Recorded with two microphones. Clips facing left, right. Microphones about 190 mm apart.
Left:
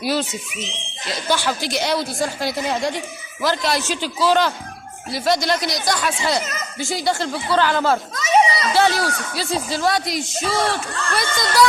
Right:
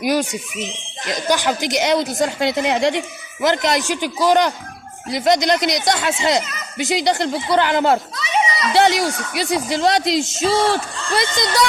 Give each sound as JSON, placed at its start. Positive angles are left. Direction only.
{"t": 0.0, "sound": "speech", "side_deg": -15}
{"t": 6.4, "sound": "speech", "side_deg": 45}
{"t": 6.7, "sound": "speech", "side_deg": -20}
{"t": 8.1, "sound": "children playing", "side_deg": 40}
{"t": 8.8, "sound": "speech", "side_deg": -15}